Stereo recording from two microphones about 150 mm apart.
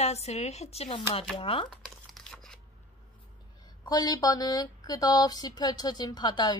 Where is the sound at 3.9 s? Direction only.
25° left (ahead or behind).